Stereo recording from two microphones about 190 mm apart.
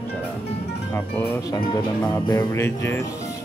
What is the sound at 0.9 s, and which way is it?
Speech, 10° left (ahead or behind).